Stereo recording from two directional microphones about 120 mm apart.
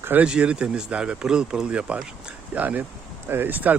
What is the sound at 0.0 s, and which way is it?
Speech, 15° right (ahead or behind).